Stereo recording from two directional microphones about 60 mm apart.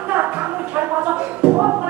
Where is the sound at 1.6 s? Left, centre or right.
Right.